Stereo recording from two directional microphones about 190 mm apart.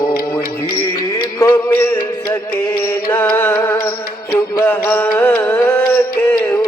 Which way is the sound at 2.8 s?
10° left (ahead or behind).